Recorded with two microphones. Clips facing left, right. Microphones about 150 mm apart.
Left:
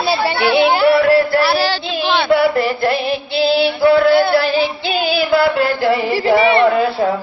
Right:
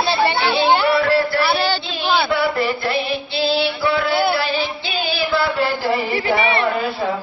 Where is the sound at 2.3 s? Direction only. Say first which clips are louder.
Left 5 dB; 50° left (ahead or behind).